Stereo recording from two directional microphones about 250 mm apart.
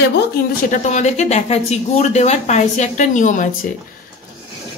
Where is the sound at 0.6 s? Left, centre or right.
Left.